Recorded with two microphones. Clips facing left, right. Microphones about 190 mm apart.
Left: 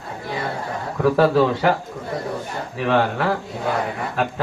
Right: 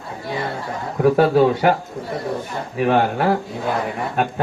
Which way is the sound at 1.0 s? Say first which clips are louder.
Right 2 dB; 25° right (ahead or behind).